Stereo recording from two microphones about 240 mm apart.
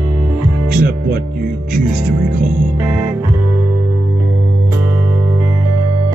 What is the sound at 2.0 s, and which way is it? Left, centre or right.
Music, right.